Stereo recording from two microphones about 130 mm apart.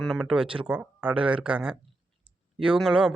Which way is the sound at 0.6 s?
10° right (ahead or behind).